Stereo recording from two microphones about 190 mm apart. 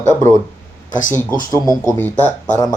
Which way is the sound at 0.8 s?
40° left (ahead or behind).